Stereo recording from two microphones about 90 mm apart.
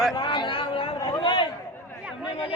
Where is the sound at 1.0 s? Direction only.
45° left (ahead or behind).